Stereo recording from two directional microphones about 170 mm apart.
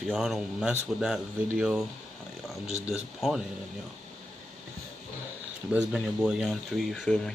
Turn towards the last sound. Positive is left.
turn(degrees=0)  # may be behind; listen again after turning